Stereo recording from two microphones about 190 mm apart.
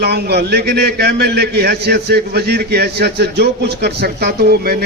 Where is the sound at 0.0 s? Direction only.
60° right (ahead or behind).